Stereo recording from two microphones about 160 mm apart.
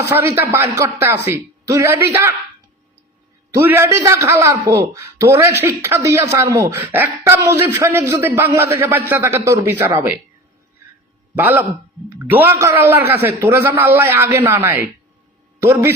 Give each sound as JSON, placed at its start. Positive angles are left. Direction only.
{"t": 0.0, "sound": "a man's voice", "side_deg": -15}
{"t": 3.5, "sound": "a man's voice", "side_deg": -15}
{"t": 11.3, "sound": "a man's voice", "side_deg": -10}